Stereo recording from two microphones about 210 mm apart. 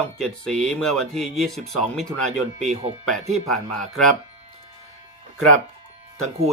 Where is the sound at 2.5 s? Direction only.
30° right (ahead or behind).